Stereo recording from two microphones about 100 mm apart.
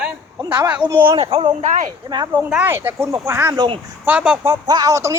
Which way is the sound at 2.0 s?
45° right (ahead or behind).